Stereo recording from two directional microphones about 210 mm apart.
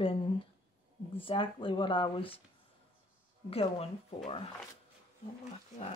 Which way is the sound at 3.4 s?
30° left (ahead or behind).